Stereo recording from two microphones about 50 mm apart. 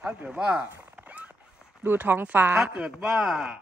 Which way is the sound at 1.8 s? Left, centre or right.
Right.